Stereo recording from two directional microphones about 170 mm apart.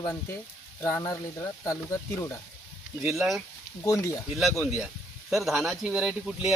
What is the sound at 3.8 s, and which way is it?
Speech, 15° left (ahead or behind).